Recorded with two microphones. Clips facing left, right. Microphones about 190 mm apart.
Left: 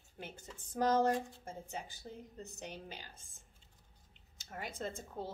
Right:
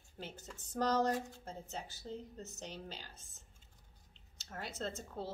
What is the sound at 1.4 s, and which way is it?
A woman's voice, 10° left (ahead or behind).